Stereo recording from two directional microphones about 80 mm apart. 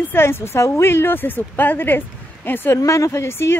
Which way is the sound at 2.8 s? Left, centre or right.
Left.